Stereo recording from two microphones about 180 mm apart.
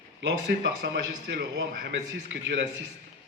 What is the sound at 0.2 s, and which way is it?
A man's voice, 75° right (ahead or behind).